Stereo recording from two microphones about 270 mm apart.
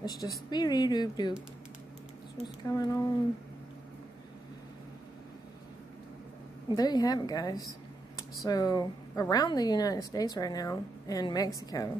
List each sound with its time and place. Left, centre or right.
0.0 s speech: centre
2.4 s speech: centre
6.7 s speech: centre